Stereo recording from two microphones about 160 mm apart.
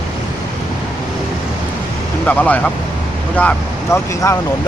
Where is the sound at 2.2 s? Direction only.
10° left (ahead or behind).